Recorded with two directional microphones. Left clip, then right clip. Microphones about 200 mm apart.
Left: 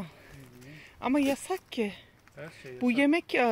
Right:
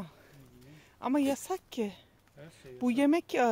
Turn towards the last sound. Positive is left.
turn(degrees=-10)  # may be behind; listen again after turning